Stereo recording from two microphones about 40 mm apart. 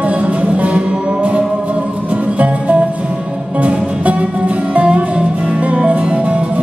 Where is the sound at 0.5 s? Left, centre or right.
Right.